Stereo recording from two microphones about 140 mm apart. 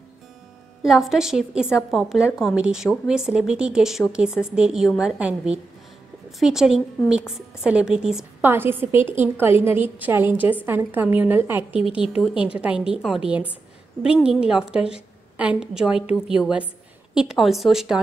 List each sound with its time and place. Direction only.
0.8 s a woman's voice: centre (ahead or behind)
8.5 s a woman's voice: 15° right (ahead or behind)